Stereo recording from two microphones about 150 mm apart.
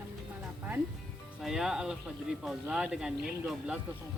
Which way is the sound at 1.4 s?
5° right (ahead or behind).